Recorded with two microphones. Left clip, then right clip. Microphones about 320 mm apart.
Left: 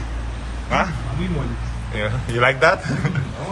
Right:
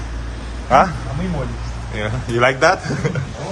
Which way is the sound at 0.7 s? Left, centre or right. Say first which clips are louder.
Right 8 dB; centre.